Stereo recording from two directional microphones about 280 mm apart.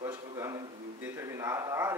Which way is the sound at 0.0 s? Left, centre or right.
Centre.